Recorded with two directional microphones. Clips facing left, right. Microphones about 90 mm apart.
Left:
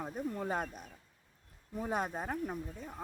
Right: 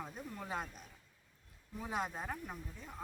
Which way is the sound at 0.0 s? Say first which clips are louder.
Left 8 dB; 40° left (ahead or behind).